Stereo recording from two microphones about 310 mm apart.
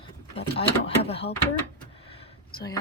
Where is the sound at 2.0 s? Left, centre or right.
Centre.